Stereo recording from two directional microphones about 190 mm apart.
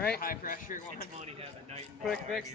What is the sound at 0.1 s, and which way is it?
Speech, 50° left (ahead or behind).